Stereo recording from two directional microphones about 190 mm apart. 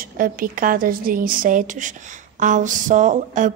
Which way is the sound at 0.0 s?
50° right (ahead or behind).